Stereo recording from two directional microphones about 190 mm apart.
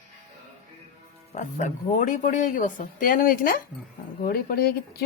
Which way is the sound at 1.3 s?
40° left (ahead or behind).